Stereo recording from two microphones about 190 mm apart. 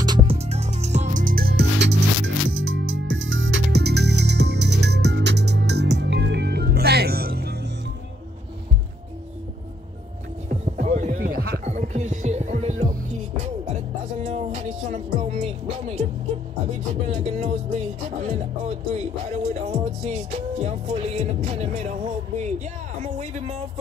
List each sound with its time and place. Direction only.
0.0 s music: 20° right (ahead or behind)
0.4 s music: 35° right (ahead or behind); by 7.7 s 60° right (ahead or behind)
10.5 s music: 35° right (ahead or behind)
11.6 s music: 35° right (ahead or behind)
14.1 s music: 35° right (ahead or behind)
17.1 s music: 35° right (ahead or behind)
22.9 s a sound: 40° right (ahead or behind)